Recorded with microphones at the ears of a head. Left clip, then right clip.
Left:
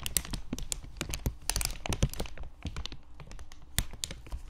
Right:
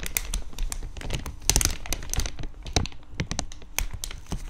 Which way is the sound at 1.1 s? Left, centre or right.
Right.